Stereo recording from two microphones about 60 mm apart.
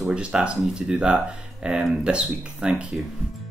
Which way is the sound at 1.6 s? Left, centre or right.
Centre.